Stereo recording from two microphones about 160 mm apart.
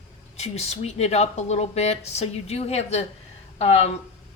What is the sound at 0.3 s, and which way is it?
A woman's voice, 40° left (ahead or behind).